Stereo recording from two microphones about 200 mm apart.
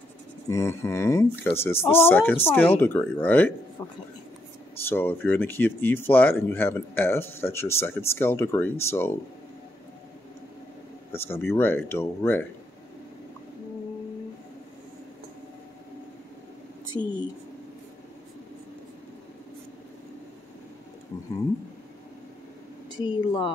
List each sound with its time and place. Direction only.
0.5 s speech: 15° left (ahead or behind)
4.8 s speech: 10° left (ahead or behind)
11.1 s speech: 10° left (ahead or behind)
17.0 s speech: 15° left (ahead or behind)
22.9 s a woman's voice: 25° left (ahead or behind)